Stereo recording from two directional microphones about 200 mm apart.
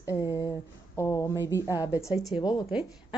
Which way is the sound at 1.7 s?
10° right (ahead or behind).